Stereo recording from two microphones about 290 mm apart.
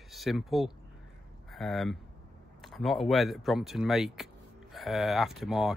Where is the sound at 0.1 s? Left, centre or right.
Centre.